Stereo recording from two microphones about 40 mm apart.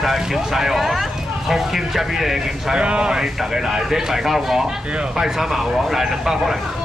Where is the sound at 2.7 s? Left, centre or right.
Right.